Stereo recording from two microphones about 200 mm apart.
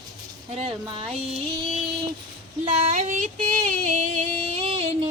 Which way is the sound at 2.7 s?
30° right (ahead or behind).